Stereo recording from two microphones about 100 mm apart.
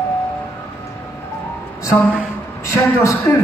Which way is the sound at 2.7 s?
30° left (ahead or behind).